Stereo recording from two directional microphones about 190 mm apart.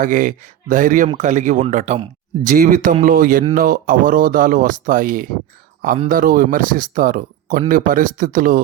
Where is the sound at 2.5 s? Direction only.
45° right (ahead or behind).